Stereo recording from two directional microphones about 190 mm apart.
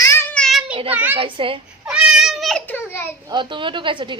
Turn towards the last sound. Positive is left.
turn(degrees=-25)  # may be behind; listen again after turning